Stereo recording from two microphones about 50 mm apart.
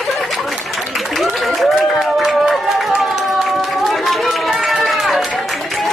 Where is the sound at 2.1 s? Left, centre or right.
Centre.